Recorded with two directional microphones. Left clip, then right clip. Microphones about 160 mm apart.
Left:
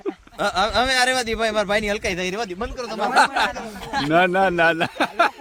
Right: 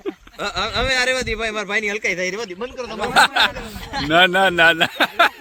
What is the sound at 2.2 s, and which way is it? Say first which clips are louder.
Speech: right 1 dB; 65° left (ahead or behind).